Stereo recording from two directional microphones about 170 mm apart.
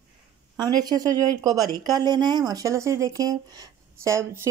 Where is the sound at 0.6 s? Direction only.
25° right (ahead or behind).